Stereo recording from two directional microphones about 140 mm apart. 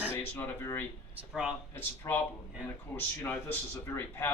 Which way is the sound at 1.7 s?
15° left (ahead or behind).